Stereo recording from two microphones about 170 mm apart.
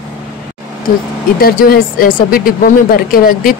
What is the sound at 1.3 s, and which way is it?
Speech, 60° left (ahead or behind).